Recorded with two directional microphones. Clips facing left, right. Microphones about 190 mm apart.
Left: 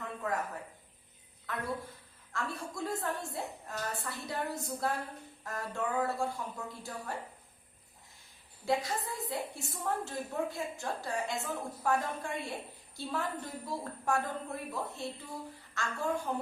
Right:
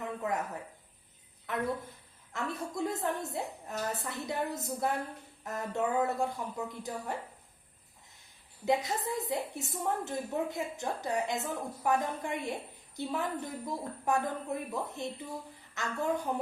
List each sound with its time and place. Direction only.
0.0 s a sound: 20° right (ahead or behind)
1.5 s a woman's voice: 20° right (ahead or behind)
8.6 s a woman's voice: 20° right (ahead or behind)